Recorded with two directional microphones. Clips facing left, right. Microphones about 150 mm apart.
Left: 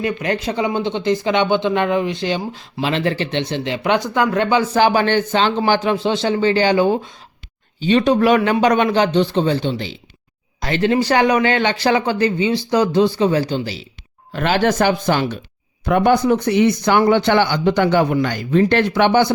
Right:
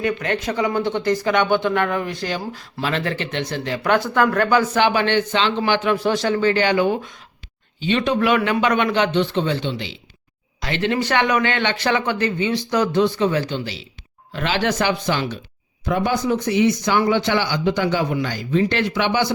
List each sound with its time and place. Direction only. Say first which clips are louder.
0.0 s speech: left 2 dB; 30° left (ahead or behind)
14.3 s speech: left 5 dB; 50° left (ahead or behind)
15.9 s a man's voice: left 6 dB; 60° left (ahead or behind)